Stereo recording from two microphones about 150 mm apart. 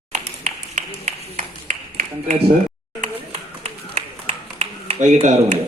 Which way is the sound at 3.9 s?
40° right (ahead or behind).